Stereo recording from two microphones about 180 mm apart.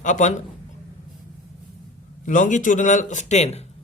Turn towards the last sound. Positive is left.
turn(degrees=40)  # may be behind; listen again after turning